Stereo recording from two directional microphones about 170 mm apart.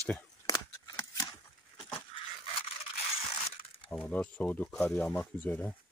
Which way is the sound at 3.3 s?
30° left (ahead or behind).